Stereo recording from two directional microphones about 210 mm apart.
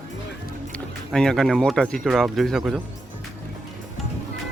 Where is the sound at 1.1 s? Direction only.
Centre (ahead or behind).